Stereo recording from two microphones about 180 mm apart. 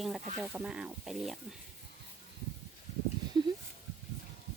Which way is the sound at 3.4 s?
25° right (ahead or behind).